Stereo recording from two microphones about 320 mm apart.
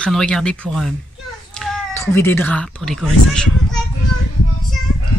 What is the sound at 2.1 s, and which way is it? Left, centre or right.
Speech, centre.